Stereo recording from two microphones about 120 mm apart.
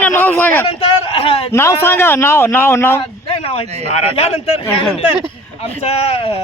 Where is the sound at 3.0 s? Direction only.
55° left (ahead or behind).